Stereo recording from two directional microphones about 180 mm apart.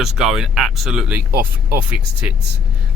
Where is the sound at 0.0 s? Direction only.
Centre (ahead or behind).